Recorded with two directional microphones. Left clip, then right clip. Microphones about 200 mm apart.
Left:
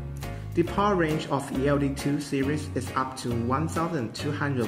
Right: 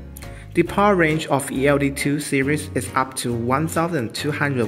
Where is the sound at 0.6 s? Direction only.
35° right (ahead or behind).